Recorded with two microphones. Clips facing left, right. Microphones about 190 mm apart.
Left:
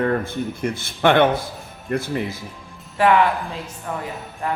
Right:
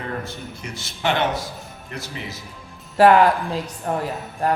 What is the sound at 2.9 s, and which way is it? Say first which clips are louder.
A woman's voice: right 3 dB; 40° right (ahead or behind).